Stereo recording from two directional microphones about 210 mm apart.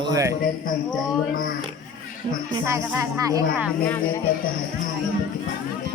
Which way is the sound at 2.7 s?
15° right (ahead or behind).